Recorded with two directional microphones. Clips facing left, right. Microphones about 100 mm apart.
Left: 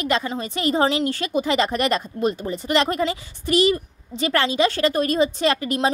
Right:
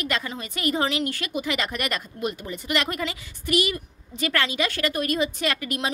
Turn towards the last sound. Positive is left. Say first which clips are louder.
# left 7 dB
turn(degrees=30)  # may be behind; listen again after turning